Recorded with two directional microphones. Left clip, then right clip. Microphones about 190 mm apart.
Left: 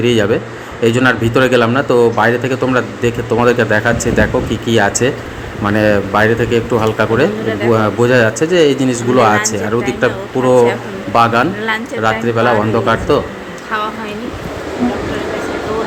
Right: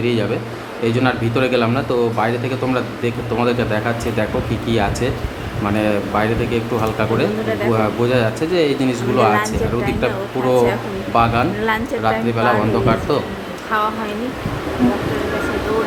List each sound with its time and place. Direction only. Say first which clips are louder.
0.0 s a man's voice: left 7 dB; 25° left (ahead or behind)